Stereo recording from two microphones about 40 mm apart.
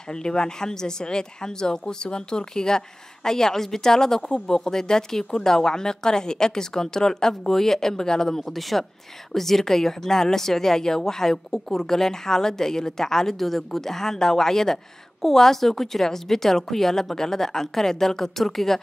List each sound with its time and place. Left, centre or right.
0.1 s a woman's voice: centre